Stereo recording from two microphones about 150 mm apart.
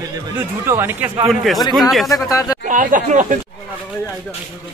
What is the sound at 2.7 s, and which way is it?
Speech, 60° right (ahead or behind).